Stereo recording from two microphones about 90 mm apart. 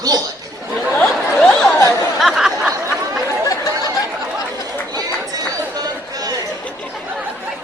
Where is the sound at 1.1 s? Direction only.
Centre (ahead or behind).